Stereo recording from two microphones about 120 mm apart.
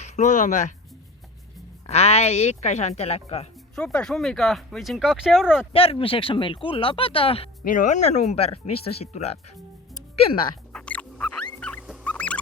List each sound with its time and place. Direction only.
0.0 s speech: 90° left
1.9 s a woman's voice: 60° left (ahead or behind)
3.8 s speech: 5° left (ahead or behind)
5.7 s speech: 50° left (ahead or behind)
7.7 s a woman's voice: 90° left; by 9.4 s 60° left (ahead or behind)
10.7 s rodents: 10° left (ahead or behind)
11.6 s music: 10° left (ahead or behind)
12.0 s fowl: 10° left (ahead or behind)